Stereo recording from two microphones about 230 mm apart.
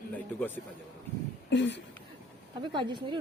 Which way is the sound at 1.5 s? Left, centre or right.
Left.